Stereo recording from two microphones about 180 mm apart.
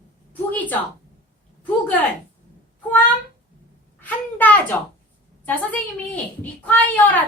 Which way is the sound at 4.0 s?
10° left (ahead or behind).